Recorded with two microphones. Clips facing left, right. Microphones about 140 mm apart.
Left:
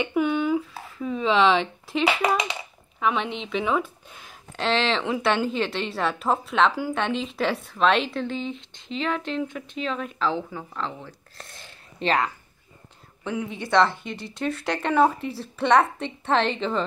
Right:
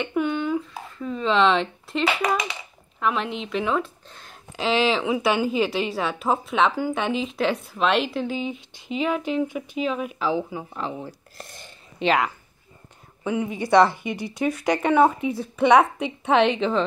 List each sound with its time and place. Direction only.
0.0 s a woman's voice: 5° left (ahead or behind)
4.6 s a woman's voice: 5° right (ahead or behind)
11.3 s a woman's voice: centre (ahead or behind)